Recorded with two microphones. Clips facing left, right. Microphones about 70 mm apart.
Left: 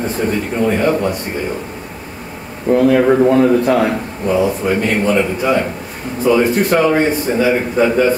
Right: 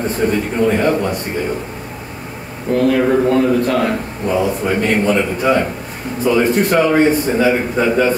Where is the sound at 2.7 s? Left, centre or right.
Left.